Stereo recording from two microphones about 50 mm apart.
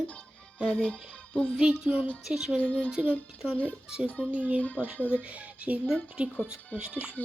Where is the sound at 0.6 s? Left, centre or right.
Left.